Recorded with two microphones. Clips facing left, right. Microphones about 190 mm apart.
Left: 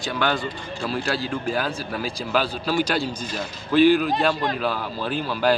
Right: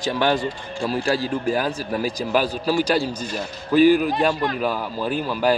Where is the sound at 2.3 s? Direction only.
10° right (ahead or behind).